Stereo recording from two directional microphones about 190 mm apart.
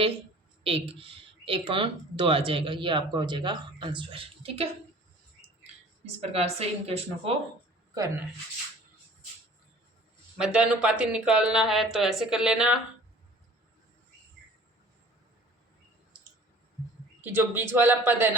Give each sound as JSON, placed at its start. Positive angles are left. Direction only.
{"t": 0.6, "sound": "speech", "side_deg": -30}
{"t": 6.1, "sound": "speech", "side_deg": -30}
{"t": 10.3, "sound": "speech", "side_deg": -5}
{"t": 17.2, "sound": "speech", "side_deg": -10}